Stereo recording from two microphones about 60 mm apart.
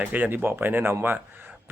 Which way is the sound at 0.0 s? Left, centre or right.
Right.